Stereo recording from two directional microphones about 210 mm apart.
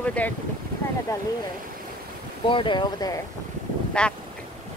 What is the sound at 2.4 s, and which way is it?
Speech, 25° left (ahead or behind).